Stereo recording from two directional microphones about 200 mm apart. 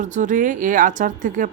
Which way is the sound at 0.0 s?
40° right (ahead or behind).